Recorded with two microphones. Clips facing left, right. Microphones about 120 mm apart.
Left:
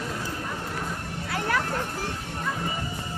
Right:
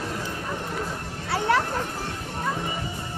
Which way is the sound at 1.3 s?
30° right (ahead or behind).